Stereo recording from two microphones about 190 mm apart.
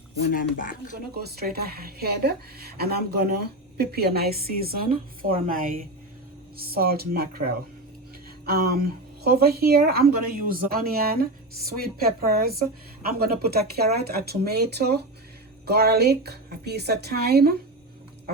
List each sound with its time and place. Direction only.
0.2 s speech: 45° left (ahead or behind)
1.1 s a woman's voice: 55° right (ahead or behind)